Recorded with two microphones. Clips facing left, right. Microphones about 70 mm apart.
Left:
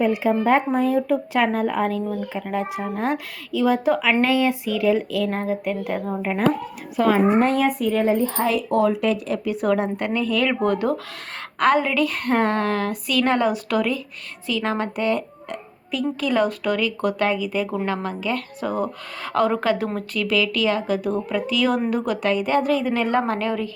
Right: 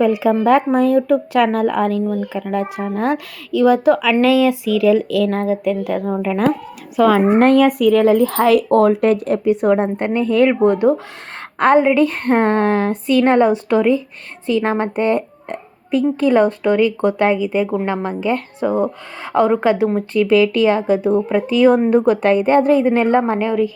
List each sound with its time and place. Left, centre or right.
0.3 s speech: right
4.2 s speech: right
6.9 s speech: right
9.4 s speech: right
23.2 s a woman's voice: centre